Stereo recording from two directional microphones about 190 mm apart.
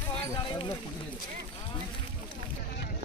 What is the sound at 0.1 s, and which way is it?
Speech, 25° left (ahead or behind).